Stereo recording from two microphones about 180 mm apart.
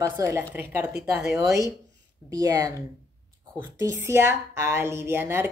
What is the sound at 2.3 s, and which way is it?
Speech, 20° right (ahead or behind).